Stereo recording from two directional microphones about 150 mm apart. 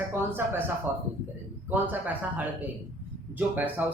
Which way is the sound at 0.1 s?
15° right (ahead or behind).